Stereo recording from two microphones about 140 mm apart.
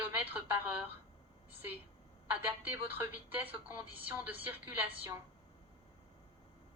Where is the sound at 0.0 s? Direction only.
10° right (ahead or behind).